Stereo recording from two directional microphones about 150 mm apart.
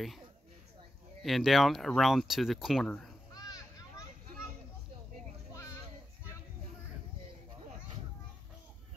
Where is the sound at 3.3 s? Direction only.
25° left (ahead or behind).